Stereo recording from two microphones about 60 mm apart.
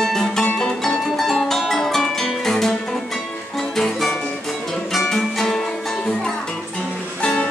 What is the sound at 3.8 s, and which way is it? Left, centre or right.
Music, centre.